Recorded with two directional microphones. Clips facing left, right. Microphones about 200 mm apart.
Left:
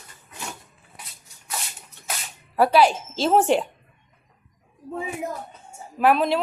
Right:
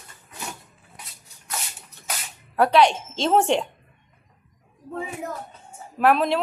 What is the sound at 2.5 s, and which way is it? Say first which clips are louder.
Speech: even; 5° left (ahead or behind).